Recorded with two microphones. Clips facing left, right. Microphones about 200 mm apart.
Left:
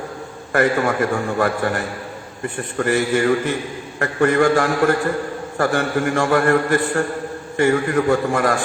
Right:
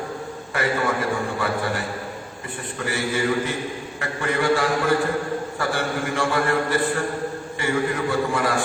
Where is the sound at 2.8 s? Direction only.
50° left (ahead or behind).